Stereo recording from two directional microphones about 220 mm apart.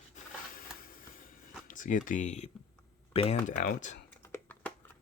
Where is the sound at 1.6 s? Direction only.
35° left (ahead or behind).